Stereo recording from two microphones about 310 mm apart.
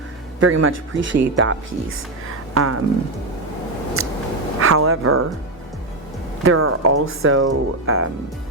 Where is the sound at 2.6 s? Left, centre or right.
Right.